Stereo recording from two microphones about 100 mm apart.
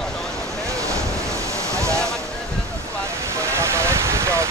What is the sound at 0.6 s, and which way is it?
Waves, 30° right (ahead or behind).